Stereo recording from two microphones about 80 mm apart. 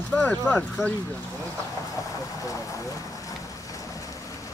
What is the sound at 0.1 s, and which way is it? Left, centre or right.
Speech, left.